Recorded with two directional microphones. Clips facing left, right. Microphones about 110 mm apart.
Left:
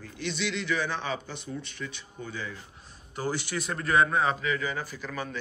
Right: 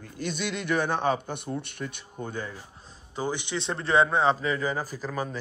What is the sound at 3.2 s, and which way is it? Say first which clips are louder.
A man's voice: right 1 dB; 20° right (ahead or behind).